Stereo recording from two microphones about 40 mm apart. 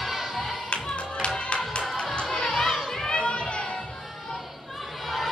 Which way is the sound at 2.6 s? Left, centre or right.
Centre.